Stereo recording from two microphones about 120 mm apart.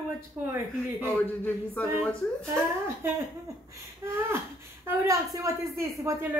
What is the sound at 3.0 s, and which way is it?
A woman's voice, 20° right (ahead or behind).